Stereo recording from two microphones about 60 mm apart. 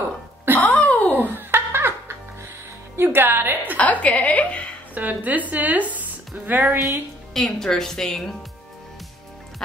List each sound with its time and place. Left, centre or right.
0.6 s a sound: left
1.3 s a sound: right
3.0 s a woman's voice: right
3.7 s a woman's voice: left
4.9 s speech: right
7.3 s speech: centre